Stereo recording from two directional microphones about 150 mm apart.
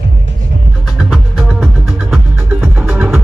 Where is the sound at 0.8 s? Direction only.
5° right (ahead or behind).